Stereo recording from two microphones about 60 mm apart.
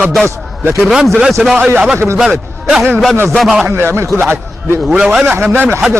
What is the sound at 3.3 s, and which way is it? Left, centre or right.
Speech, centre.